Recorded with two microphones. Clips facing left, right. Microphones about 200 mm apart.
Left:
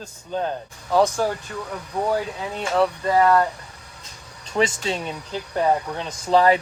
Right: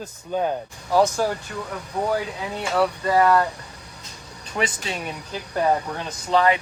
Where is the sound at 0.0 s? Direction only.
10° right (ahead or behind).